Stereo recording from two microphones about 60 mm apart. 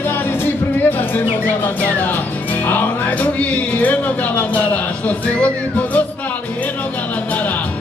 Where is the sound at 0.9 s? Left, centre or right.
Left.